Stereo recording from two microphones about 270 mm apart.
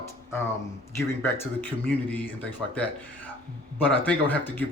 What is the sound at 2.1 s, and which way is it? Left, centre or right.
Speech, centre.